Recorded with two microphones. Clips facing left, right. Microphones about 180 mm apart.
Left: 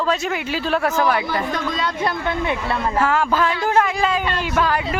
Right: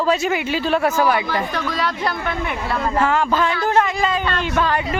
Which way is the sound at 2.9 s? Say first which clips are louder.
Right 1 dB; 5° left (ahead or behind).